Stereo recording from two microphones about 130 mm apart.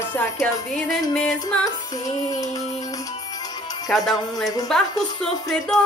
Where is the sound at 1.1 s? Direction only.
10° left (ahead or behind).